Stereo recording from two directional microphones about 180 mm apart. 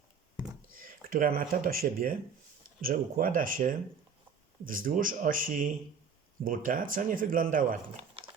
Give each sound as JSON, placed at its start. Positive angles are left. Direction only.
{"t": 0.7, "sound": "speech", "side_deg": -50}